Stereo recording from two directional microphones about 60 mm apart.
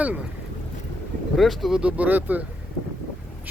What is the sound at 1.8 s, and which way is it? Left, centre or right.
Speech, right.